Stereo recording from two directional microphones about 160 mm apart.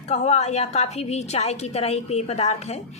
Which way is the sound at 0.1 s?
40° left (ahead or behind).